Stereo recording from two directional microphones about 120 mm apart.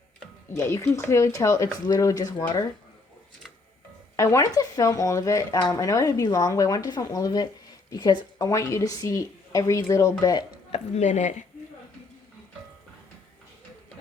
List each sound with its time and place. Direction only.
0.5 s a woman's voice: 25° left (ahead or behind)
4.2 s a woman's voice: 25° left (ahead or behind)
10.7 s a woman's voice: 70° left (ahead or behind)